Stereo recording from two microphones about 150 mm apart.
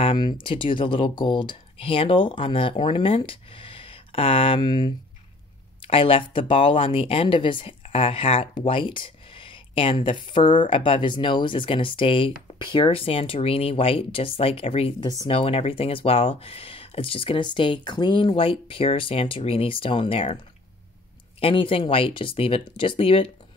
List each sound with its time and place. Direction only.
0.0 s speech: 30° left (ahead or behind)